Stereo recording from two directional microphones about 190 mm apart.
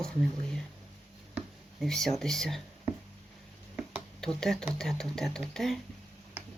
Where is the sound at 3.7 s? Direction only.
5° left (ahead or behind).